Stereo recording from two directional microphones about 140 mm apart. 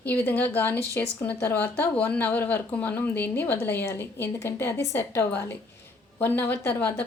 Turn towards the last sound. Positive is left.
turn(degrees=10)  # may be behind; listen again after turning